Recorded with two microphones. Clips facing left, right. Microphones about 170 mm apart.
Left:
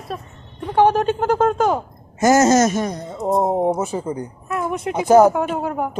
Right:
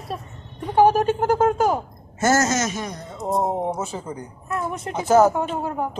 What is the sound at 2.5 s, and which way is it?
Speech, 45° left (ahead or behind).